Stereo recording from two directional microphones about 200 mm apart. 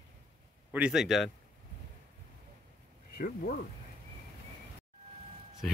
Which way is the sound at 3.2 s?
45° left (ahead or behind).